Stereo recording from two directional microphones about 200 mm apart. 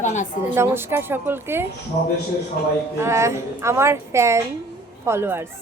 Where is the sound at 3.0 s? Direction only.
15° right (ahead or behind).